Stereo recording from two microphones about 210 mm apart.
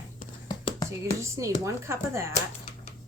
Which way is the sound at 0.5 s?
20° left (ahead or behind).